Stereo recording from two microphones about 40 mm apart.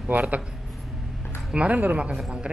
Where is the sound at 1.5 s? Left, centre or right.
Right.